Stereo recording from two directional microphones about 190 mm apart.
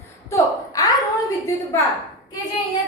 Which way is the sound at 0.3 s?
20° left (ahead or behind).